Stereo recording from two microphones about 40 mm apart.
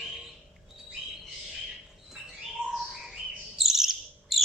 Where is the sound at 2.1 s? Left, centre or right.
Centre.